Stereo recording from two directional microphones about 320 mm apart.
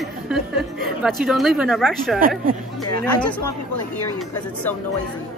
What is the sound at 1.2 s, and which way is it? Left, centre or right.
Speech, centre.